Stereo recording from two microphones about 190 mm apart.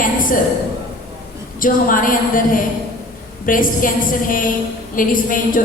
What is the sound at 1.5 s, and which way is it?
A woman's voice, 45° left (ahead or behind).